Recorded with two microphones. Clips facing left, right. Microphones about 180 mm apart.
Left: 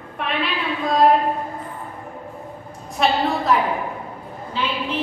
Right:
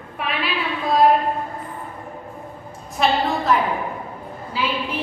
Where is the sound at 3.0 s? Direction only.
Centre (ahead or behind).